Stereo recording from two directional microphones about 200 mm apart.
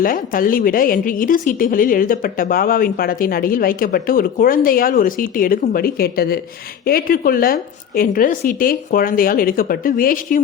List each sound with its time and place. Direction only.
0.0 s a woman's voice: 45° left (ahead or behind)